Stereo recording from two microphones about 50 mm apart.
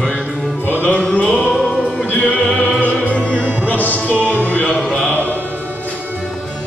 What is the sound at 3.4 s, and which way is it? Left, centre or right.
Music, right.